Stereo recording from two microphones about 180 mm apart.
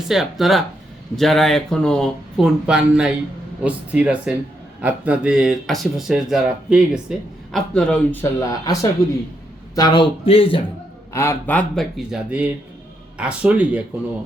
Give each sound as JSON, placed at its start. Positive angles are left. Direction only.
{"t": 0.1, "sound": "speech", "side_deg": 0}
{"t": 11.1, "sound": "speech", "side_deg": 15}